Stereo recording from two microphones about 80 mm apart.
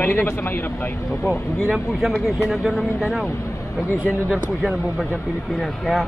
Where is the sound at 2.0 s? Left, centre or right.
Centre.